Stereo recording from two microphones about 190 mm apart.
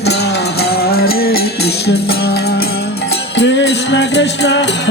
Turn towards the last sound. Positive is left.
turn(degrees=70)  # may be behind; listen again after turning